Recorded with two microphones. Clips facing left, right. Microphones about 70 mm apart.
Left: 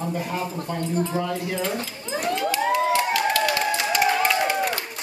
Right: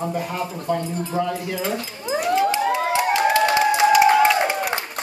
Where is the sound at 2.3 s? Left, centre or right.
Right.